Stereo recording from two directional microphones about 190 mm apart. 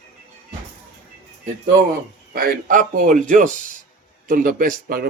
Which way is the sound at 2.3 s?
50° right (ahead or behind).